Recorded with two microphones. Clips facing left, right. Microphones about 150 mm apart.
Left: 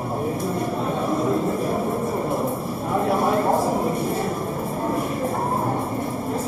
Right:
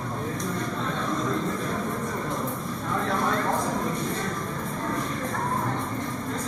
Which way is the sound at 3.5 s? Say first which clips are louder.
Left 6 dB; 30° left (ahead or behind).